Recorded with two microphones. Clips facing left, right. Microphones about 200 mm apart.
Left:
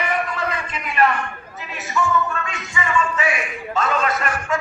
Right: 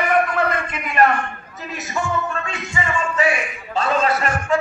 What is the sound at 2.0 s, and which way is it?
Music, 50° right (ahead or behind).